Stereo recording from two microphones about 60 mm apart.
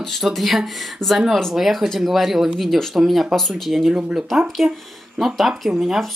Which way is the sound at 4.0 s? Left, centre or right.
Centre.